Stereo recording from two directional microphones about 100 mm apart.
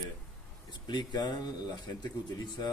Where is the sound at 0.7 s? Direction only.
45° left (ahead or behind).